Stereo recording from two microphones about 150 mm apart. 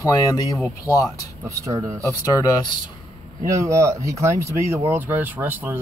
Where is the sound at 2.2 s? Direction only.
25° left (ahead or behind).